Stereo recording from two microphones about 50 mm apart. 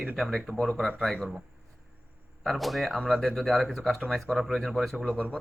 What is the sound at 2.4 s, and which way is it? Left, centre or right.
Speech, centre.